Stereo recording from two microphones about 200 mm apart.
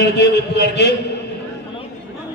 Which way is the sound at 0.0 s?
55° left (ahead or behind).